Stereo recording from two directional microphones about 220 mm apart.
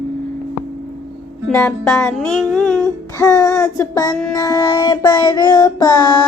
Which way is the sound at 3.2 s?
15° left (ahead or behind).